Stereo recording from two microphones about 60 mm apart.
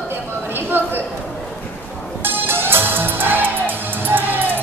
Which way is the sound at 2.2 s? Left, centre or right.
Right.